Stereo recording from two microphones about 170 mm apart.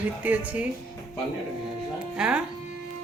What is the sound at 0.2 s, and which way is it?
Speech, 10° right (ahead or behind).